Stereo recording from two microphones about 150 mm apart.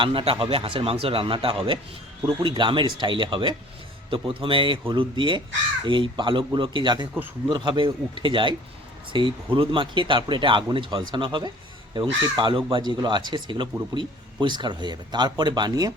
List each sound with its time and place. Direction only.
0.0 s speech: 35° right (ahead or behind)